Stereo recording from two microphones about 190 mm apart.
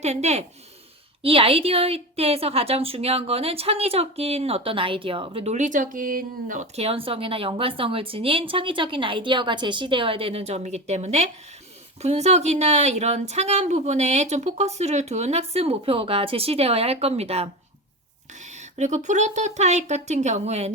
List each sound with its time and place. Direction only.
0.0 s a woman's voice: 35° right (ahead or behind)